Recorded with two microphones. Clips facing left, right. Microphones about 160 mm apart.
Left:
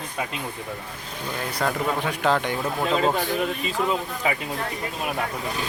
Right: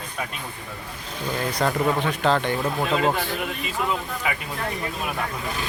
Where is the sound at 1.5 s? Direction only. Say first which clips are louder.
Right 2 dB; 5° left (ahead or behind).